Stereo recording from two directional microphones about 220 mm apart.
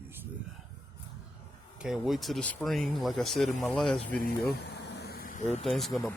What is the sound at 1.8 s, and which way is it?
Speech, centre (ahead or behind).